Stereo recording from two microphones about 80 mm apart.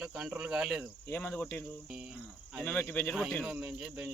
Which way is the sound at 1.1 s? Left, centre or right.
Left.